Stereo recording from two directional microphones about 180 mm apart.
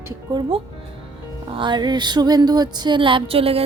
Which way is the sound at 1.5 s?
25° right (ahead or behind).